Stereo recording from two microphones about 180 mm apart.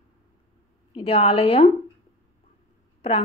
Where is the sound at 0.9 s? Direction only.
30° left (ahead or behind).